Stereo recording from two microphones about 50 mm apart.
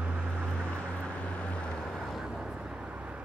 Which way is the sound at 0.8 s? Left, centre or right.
Left.